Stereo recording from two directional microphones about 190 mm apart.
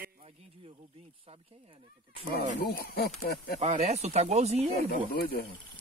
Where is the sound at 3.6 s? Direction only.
35° right (ahead or behind).